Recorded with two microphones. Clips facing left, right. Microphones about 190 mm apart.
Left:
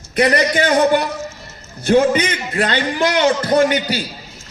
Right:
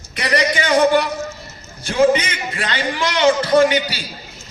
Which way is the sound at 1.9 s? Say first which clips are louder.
Left 1 dB; 40° left (ahead or behind).